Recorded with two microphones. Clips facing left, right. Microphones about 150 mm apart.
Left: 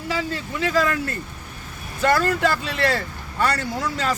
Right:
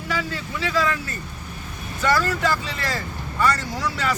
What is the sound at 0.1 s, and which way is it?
Speech, 35° left (ahead or behind).